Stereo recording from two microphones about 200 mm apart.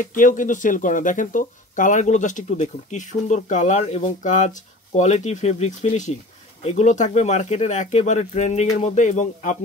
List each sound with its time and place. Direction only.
0.0 s speech: 40° left (ahead or behind)